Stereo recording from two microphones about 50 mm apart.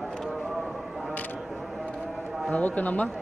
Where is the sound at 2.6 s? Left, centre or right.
Left.